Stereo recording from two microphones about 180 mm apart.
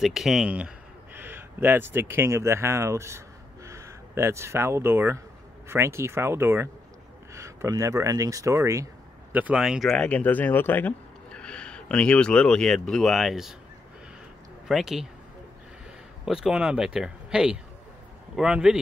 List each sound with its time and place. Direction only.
0.0 s a man's voice: centre (ahead or behind)
14.7 s speech: centre (ahead or behind)
16.3 s speech: 5° right (ahead or behind)